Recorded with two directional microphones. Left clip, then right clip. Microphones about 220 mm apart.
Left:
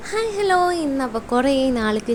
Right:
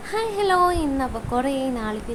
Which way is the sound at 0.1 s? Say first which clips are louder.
Left 2 dB; 10° left (ahead or behind).